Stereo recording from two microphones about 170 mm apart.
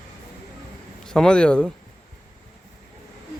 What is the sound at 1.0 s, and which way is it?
Speech, 5° left (ahead or behind).